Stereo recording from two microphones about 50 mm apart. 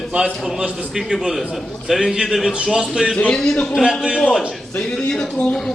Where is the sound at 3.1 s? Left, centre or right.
Left.